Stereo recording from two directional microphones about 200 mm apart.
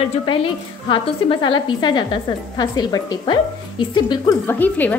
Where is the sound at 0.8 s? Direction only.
25° left (ahead or behind).